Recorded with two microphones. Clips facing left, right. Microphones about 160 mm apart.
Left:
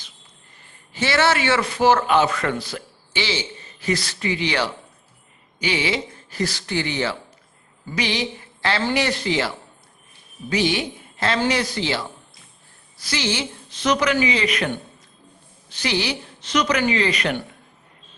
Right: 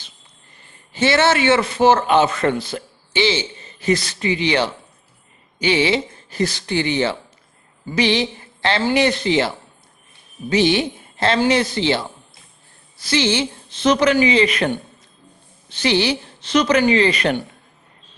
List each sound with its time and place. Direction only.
0.9 s a man's voice: 25° right (ahead or behind)
10.5 s a woman's voice: 25° right (ahead or behind)
15.7 s a man's voice: 25° right (ahead or behind)